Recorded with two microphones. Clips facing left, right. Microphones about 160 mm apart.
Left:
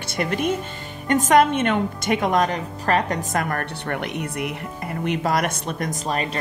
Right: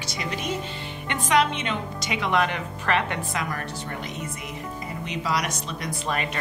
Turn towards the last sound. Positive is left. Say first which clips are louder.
# left 3 dB
turn(degrees=35)  # may be behind; listen again after turning